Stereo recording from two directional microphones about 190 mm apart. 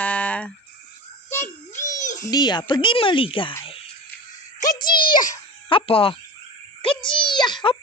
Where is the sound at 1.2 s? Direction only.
10° left (ahead or behind).